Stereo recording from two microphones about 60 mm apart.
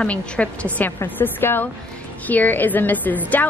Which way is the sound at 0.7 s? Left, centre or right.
Left.